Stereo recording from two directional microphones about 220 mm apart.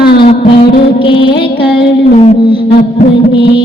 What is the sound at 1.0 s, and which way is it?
Music, 25° left (ahead or behind).